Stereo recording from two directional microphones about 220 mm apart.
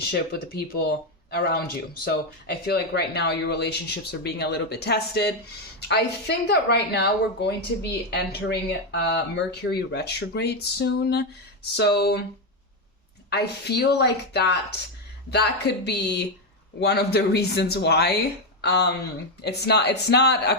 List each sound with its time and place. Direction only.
0.1 s speech: 45° left (ahead or behind)
2.7 s speech: 50° left (ahead or behind)
13.3 s speech: 45° left (ahead or behind)